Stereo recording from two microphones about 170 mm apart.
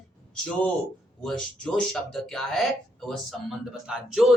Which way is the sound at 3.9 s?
5° right (ahead or behind).